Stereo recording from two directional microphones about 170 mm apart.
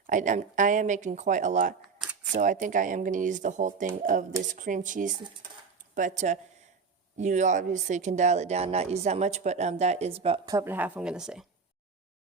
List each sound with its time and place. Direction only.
0.1 s speech: 50° right (ahead or behind)
10.4 s speech: 20° right (ahead or behind)